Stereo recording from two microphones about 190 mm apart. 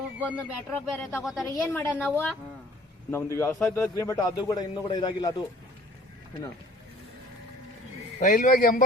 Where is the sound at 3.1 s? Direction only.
15° left (ahead or behind).